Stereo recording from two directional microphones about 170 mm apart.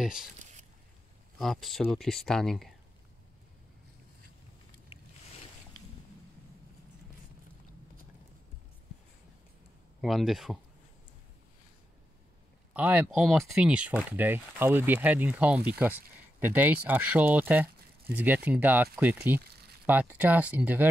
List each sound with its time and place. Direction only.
0.0 s speech: 5° right (ahead or behind)
1.4 s speech: centre (ahead or behind)
4.9 s boat: 35° left (ahead or behind)
10.0 s speech: centre (ahead or behind)
12.7 s speech: 10° right (ahead or behind)